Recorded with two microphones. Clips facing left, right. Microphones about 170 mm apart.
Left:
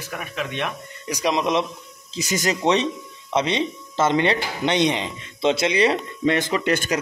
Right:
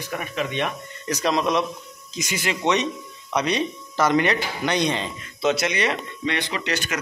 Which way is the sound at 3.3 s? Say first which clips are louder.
Left 1 dB; 25° left (ahead or behind).